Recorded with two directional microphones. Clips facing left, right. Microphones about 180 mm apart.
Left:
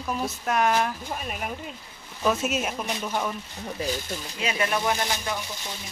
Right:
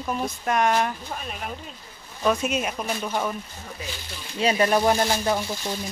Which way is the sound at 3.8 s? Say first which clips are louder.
Left 10 dB; 40° left (ahead or behind).